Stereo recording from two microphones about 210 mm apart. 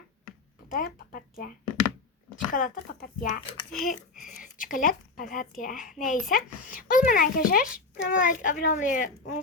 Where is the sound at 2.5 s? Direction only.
40° left (ahead or behind).